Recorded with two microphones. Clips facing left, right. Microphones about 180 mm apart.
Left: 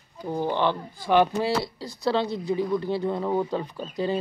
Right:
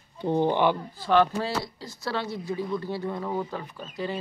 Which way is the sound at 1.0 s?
15° left (ahead or behind).